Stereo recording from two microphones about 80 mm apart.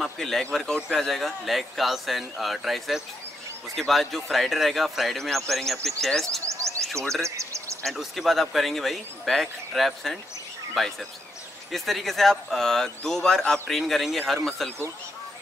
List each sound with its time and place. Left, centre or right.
0.0 s speech: centre
6.4 s a sound: right
7.2 s speech: right
7.8 s speech: centre